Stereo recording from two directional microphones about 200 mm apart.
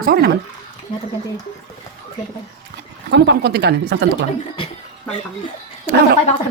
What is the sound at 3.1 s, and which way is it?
Speech, 60° right (ahead or behind).